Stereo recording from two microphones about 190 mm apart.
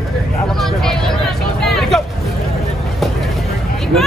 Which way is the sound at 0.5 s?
Centre (ahead or behind).